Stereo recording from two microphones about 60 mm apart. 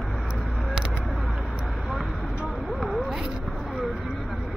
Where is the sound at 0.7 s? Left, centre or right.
Centre.